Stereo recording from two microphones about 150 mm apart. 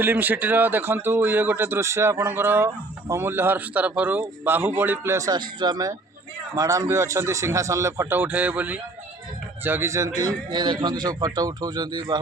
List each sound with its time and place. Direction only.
0.0 s a man's voice: 10° right (ahead or behind); by 12.2 s 30° right (ahead or behind)